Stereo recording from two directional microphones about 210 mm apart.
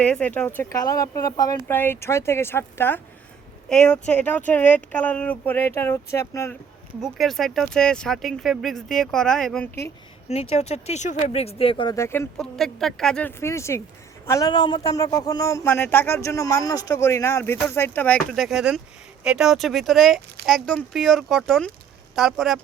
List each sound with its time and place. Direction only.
0.0 s speech: 5° left (ahead or behind)
7.0 s speech: centre (ahead or behind)
10.2 s speech: 30° left (ahead or behind); by 22.6 s centre (ahead or behind)